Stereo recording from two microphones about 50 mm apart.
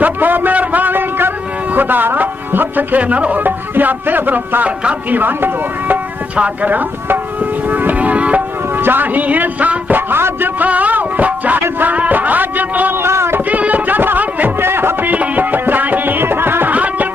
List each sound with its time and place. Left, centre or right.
0.0 s a man's voice: right
3.0 s music: right
6.3 s music: right
8.7 s a man's voice: right
10.6 s music: right
12.9 s a sound: right
13.5 s music: right
14.6 s music: right
15.0 s music: right
16.7 s music: right